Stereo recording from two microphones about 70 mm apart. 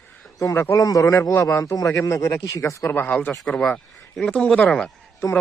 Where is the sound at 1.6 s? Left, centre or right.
Left.